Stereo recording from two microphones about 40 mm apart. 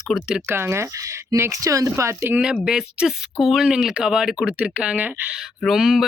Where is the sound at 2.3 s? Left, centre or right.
Right.